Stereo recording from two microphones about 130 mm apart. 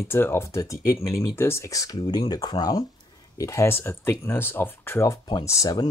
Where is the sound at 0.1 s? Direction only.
20° left (ahead or behind).